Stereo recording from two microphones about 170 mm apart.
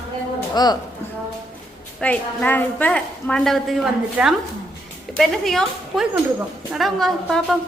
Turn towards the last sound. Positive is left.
turn(degrees=0)  # may be behind; listen again after turning